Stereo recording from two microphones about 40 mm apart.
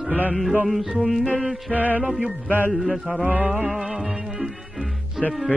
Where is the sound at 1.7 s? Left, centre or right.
Right.